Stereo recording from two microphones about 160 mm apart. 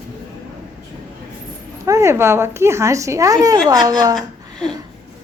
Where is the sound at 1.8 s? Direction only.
20° right (ahead or behind).